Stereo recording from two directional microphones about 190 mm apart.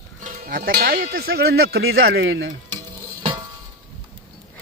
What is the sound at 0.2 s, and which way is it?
Speech, 45° right (ahead or behind).